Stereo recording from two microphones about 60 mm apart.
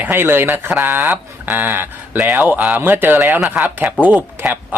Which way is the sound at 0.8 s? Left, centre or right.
Right.